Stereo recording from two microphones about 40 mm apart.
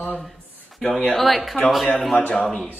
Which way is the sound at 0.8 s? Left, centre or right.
Left.